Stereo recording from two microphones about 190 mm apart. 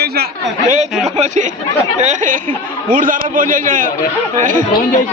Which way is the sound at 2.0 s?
40° right (ahead or behind).